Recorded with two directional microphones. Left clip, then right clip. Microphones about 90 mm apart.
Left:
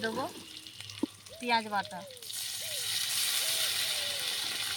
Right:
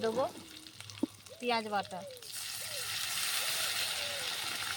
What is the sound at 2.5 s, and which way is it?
Vehicle, centre (ahead or behind).